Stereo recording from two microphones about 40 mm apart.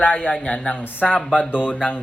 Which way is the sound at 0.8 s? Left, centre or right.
Left.